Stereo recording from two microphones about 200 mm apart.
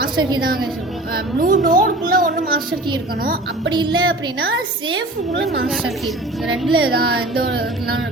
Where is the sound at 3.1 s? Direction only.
50° right (ahead or behind).